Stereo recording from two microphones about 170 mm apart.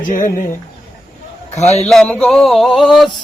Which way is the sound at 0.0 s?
50° left (ahead or behind).